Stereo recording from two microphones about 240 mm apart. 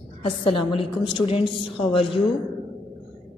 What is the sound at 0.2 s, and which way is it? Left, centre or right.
A woman's voice, left.